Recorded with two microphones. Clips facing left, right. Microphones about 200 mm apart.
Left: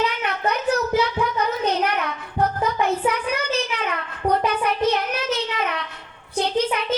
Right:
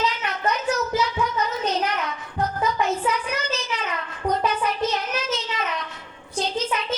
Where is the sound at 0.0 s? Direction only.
60° left (ahead or behind).